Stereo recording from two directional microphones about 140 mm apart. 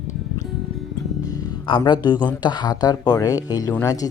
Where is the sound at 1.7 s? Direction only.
35° left (ahead or behind).